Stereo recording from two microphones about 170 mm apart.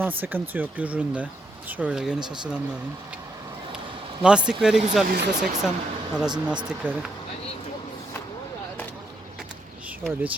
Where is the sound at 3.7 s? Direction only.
5° right (ahead or behind).